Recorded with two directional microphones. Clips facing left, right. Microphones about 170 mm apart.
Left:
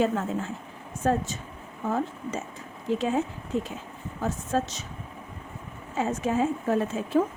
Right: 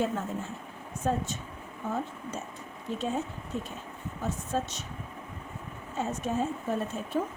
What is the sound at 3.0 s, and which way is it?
A woman's voice, 90° left.